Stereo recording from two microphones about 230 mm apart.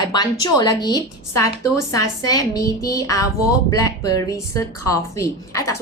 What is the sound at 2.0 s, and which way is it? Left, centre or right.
A woman's voice, centre.